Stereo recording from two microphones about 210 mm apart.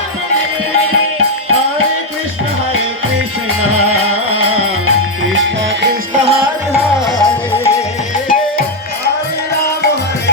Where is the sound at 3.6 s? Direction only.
90° right.